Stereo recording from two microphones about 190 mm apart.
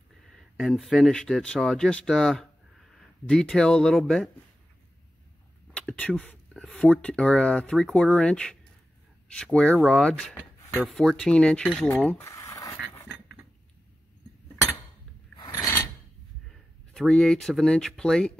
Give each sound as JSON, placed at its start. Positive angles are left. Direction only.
{"t": 0.4, "sound": "speech", "side_deg": 0}
{"t": 5.7, "sound": "speech", "side_deg": 5}
{"t": 15.3, "sound": "mechanisms", "side_deg": 15}
{"t": 16.4, "sound": "speech", "side_deg": 0}